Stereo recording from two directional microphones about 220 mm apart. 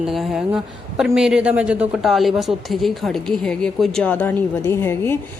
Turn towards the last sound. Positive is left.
turn(degrees=10)  # may be behind; listen again after turning